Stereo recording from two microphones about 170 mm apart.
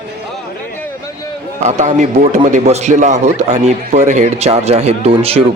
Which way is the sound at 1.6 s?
45° right (ahead or behind).